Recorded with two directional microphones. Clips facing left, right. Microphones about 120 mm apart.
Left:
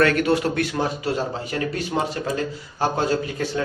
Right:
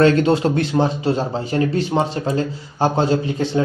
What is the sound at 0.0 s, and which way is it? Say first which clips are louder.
Speech: right 4 dB; 25° right (ahead or behind).